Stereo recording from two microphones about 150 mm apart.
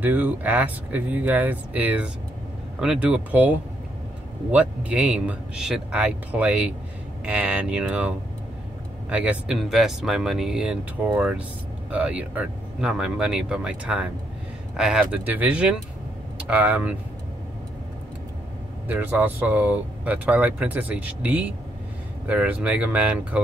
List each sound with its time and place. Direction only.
0.0 s speech: 10° right (ahead or behind)
9.1 s speech: 10° right (ahead or behind)
18.9 s speech: 10° right (ahead or behind)